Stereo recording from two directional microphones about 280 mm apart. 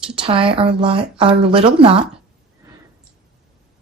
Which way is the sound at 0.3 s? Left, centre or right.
Centre.